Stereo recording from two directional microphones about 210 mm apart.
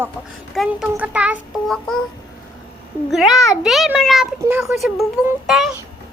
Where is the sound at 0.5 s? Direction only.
Centre (ahead or behind).